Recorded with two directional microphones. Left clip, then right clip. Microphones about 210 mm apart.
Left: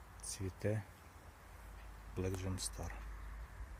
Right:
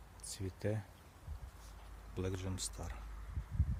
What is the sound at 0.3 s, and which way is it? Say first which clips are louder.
Speech: even; 5° right (ahead or behind).